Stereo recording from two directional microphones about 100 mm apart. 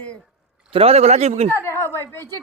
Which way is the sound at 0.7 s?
85° right.